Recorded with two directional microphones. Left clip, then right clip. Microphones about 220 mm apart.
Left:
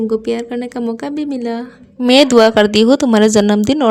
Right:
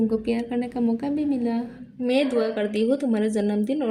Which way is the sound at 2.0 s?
45° left (ahead or behind).